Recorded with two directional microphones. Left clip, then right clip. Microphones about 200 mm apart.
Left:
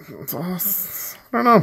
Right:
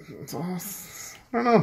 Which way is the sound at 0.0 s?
40° left (ahead or behind).